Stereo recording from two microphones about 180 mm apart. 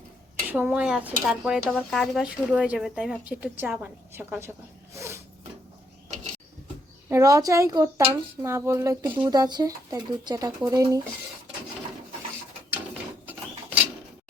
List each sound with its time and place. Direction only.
0.4 s speech: 10° right (ahead or behind)
7.1 s speech: 15° right (ahead or behind)